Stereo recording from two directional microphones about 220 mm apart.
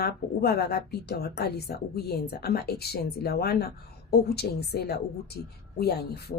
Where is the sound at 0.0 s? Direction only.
45° left (ahead or behind).